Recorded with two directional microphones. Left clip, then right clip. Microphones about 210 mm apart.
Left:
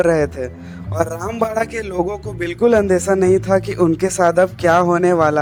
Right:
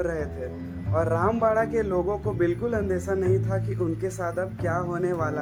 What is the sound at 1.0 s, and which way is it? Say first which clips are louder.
Speech: right 3 dB; centre (ahead or behind).